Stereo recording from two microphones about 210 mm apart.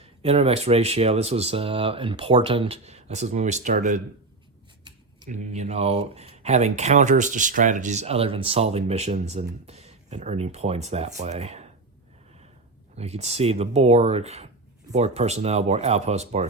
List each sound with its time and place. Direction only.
0.0 s speech: 30° right (ahead or behind)
5.2 s speech: 35° right (ahead or behind)
13.0 s speech: 30° right (ahead or behind)